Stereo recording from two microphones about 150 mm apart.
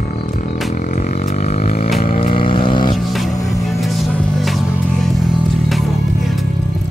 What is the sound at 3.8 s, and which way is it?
Music, centre (ahead or behind).